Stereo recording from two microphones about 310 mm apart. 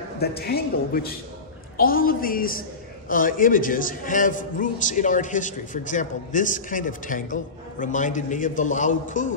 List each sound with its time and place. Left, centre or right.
0.2 s a man's voice: left